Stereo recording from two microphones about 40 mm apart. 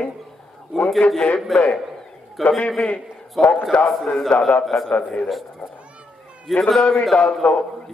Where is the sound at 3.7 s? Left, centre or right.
Left.